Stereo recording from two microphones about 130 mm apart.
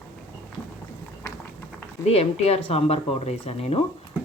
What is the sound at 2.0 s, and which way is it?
Speech, 50° left (ahead or behind).